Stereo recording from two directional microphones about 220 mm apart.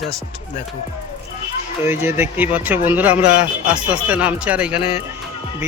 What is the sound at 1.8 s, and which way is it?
A man's voice, 10° right (ahead or behind).